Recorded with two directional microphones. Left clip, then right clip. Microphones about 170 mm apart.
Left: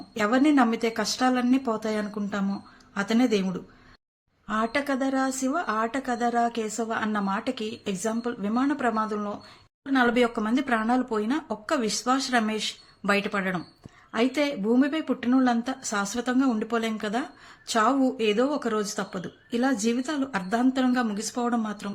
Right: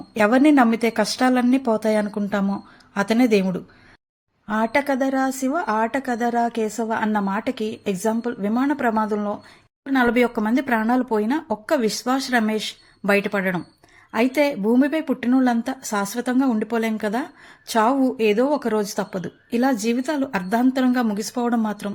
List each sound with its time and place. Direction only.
0.1 s speech: 45° right (ahead or behind)
4.4 s a woman's voice: 35° right (ahead or behind)